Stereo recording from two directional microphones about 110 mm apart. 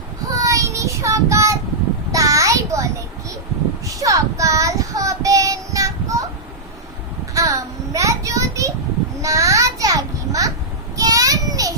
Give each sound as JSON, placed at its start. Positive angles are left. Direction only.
{"t": 0.3, "sound": "child singing", "side_deg": -30}
{"t": 2.1, "sound": "a sound", "side_deg": -30}
{"t": 4.0, "sound": "child singing", "side_deg": -30}
{"t": 7.3, "sound": "child singing", "side_deg": -30}